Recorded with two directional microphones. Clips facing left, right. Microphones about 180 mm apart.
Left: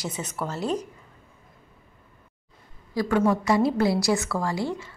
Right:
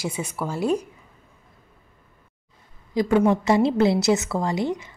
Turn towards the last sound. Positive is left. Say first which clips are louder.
# right 3 dB
turn(degrees=-20)  # may be behind; listen again after turning